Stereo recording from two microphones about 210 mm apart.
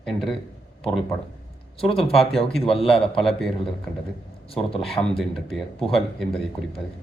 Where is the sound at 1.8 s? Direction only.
25° left (ahead or behind).